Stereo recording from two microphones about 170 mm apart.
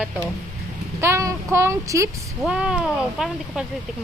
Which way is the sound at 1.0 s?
15° right (ahead or behind).